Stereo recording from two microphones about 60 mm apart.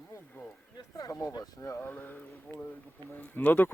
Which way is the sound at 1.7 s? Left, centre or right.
Left.